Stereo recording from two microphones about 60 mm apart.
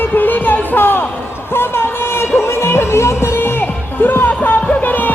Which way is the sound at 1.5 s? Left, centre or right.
Left.